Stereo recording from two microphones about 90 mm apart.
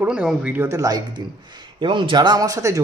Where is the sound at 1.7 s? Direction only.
65° right (ahead or behind); by 2.8 s 40° right (ahead or behind).